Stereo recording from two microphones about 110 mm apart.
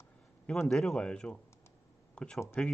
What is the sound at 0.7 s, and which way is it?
Speech, 5° left (ahead or behind).